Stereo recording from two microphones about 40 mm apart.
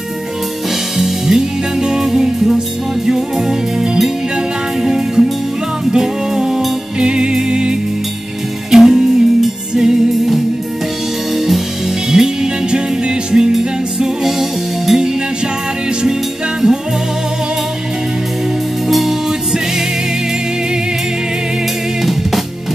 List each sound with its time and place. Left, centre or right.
0.9 s music: centre
12.2 s music: centre
16.6 s music: centre
18.9 s music: centre